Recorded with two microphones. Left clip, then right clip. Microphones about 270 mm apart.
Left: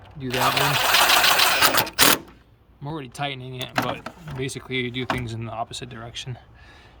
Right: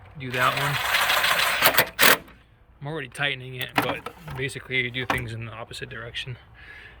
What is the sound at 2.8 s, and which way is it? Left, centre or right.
Speech, centre.